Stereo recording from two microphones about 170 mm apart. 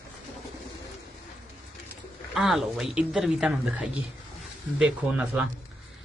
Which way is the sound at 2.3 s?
Centre (ahead or behind).